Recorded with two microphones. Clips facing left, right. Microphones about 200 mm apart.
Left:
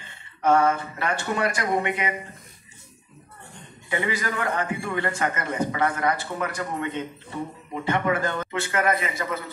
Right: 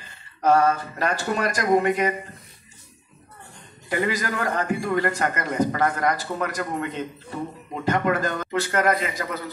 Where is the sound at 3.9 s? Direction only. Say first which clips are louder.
Right 2 dB; 40° right (ahead or behind).